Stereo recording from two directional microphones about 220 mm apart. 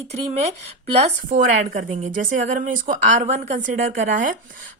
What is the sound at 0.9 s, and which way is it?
A woman's voice, 35° right (ahead or behind).